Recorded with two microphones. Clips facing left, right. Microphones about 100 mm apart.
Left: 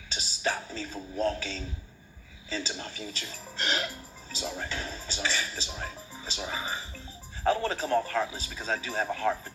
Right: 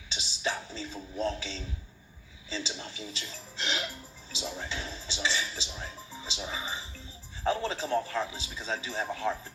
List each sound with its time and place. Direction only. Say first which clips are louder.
0.1 s music: left 2 dB; 45° left (ahead or behind)
2.5 s speech: left 2 dB; 50° left (ahead or behind)